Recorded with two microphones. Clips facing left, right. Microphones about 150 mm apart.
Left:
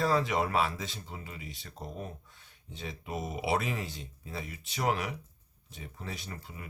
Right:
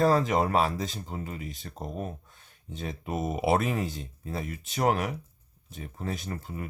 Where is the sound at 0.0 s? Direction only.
45° right (ahead or behind).